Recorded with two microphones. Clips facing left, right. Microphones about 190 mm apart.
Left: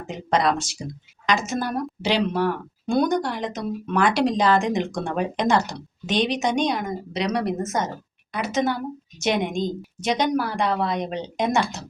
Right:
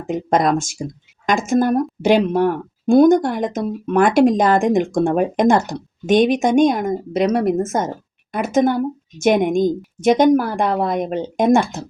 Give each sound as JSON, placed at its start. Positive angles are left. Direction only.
{"t": 0.1, "sound": "a woman's voice", "side_deg": -50}